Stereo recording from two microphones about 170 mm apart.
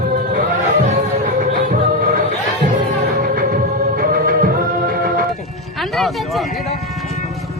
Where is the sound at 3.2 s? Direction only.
55° right (ahead or behind).